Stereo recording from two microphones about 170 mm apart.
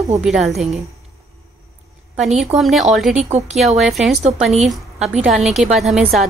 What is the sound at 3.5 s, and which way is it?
A woman's voice, centre (ahead or behind).